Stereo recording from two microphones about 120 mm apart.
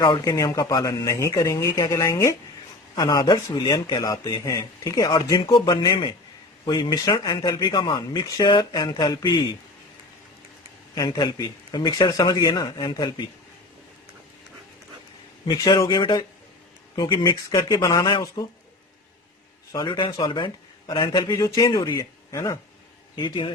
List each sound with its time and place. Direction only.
0.0 s speech: 35° left (ahead or behind)
10.9 s speech: 35° left (ahead or behind)
15.4 s speech: 35° left (ahead or behind)
19.7 s speech: 40° left (ahead or behind); by 22.5 s 25° left (ahead or behind)
23.1 s speech: 40° left (ahead or behind)